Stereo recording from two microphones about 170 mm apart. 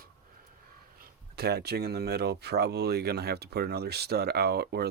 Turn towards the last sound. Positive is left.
turn(degrees=-70)  # may be behind; listen again after turning